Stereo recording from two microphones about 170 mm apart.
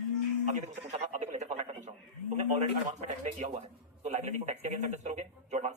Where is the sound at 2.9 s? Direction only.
45° right (ahead or behind).